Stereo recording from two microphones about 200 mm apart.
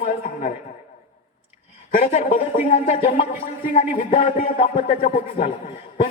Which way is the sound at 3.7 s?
35° left (ahead or behind).